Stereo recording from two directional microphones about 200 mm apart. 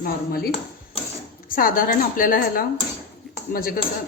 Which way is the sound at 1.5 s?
45° left (ahead or behind).